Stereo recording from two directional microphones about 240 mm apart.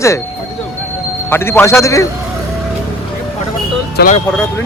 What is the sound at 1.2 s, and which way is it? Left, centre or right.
Speech, centre.